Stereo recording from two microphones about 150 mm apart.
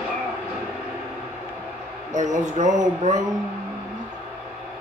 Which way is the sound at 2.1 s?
55° right (ahead or behind).